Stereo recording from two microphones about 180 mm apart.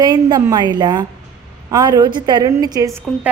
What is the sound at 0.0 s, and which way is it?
A woman's voice, 20° right (ahead or behind).